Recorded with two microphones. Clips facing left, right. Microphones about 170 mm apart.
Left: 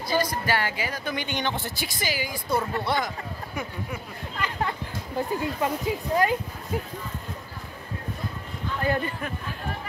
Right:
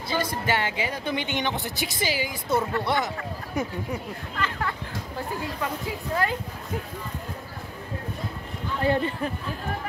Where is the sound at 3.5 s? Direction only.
40° right (ahead or behind).